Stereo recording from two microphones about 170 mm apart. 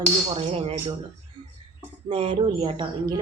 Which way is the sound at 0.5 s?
35° right (ahead or behind).